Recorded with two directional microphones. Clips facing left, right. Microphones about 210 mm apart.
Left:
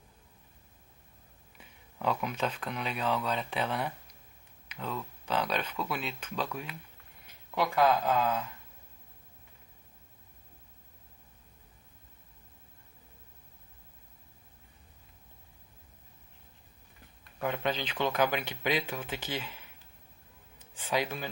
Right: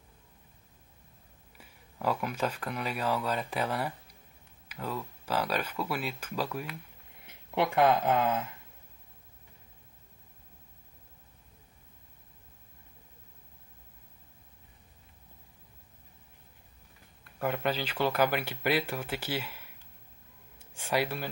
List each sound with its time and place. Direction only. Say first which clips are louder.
1.6 s speech: right 1 dB; 5° right (ahead or behind)
7.2 s speech: right 2 dB; 25° right (ahead or behind)
17.4 s speech: right 1 dB; 5° right (ahead or behind)